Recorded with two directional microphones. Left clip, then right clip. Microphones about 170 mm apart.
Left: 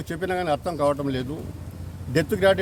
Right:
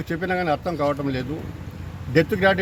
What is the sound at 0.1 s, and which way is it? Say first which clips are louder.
Speech: right 2 dB; 35° left (ahead or behind).